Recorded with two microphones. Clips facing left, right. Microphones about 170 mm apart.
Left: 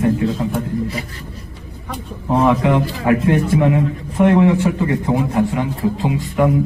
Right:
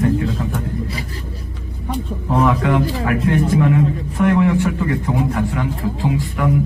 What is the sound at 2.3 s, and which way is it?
A man's voice, 20° left (ahead or behind).